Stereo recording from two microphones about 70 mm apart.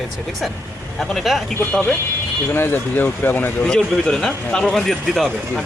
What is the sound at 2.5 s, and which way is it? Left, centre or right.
Speech, left.